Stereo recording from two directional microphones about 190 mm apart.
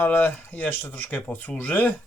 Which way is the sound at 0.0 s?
10° left (ahead or behind).